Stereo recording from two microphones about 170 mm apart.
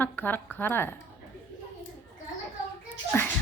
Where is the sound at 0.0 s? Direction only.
10° left (ahead or behind).